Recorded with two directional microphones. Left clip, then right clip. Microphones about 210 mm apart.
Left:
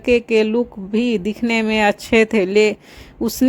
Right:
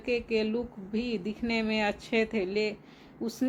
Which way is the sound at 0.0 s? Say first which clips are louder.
Left 14 dB; 50° left (ahead or behind).